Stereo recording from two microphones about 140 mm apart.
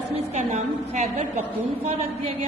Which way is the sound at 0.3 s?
60° right (ahead or behind).